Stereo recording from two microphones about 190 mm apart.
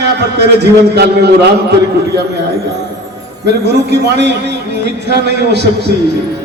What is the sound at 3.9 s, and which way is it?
A man's voice, 60° right (ahead or behind).